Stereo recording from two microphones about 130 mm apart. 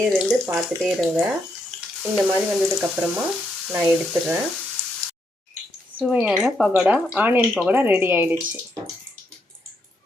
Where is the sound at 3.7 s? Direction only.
15° right (ahead or behind).